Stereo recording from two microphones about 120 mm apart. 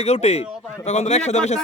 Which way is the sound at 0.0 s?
60° left (ahead or behind).